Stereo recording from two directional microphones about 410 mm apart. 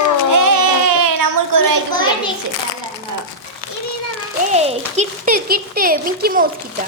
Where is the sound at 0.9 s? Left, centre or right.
Right.